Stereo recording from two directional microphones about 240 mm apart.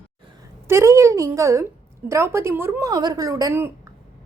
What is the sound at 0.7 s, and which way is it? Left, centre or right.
A woman's voice, centre.